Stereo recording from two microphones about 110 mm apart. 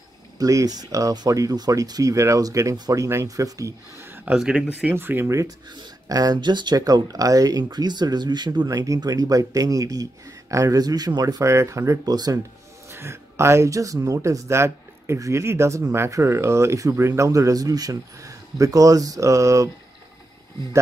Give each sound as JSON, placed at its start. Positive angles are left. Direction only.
{"t": 0.4, "sound": "speech", "side_deg": -30}
{"t": 4.4, "sound": "speech", "side_deg": -5}
{"t": 4.8, "sound": "speech", "side_deg": -20}
{"t": 5.8, "sound": "speech", "side_deg": -35}
{"t": 12.9, "sound": "speech", "side_deg": -25}